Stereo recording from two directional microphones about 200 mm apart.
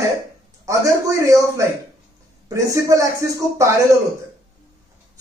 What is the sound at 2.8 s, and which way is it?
Speech, 15° right (ahead or behind).